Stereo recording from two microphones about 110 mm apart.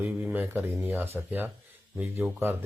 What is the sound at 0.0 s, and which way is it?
Speech, 25° right (ahead or behind).